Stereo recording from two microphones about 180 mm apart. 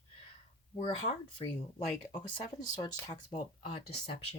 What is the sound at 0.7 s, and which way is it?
Speech, 25° left (ahead or behind).